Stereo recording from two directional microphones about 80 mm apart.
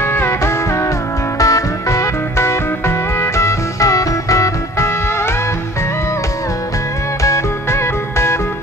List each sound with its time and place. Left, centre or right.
0.0 s music: left
1.4 s music: left
7.2 s music: left